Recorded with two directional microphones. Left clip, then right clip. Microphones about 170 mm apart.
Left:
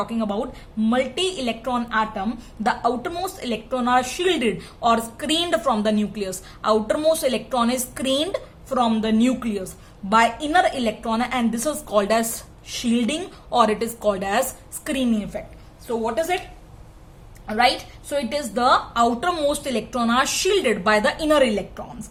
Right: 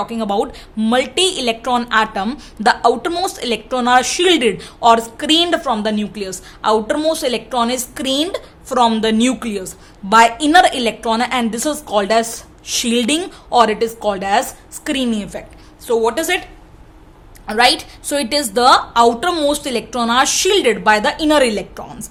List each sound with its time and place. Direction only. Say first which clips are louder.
0.0 s a woman's voice: right 7 dB; 15° right (ahead or behind)
12.7 s a woman's voice: right 8 dB; 25° right (ahead or behind)
13.5 s a woman's voice: right 6 dB; 10° right (ahead or behind)
15.9 s speech: right 7 dB; 35° right (ahead or behind)
17.4 s a woman's voice: right 6 dB; 25° right (ahead or behind)